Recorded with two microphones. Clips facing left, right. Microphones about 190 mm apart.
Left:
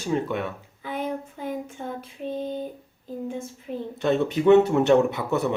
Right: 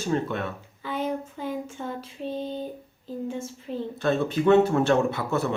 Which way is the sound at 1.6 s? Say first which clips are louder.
Even; 55° left (ahead or behind).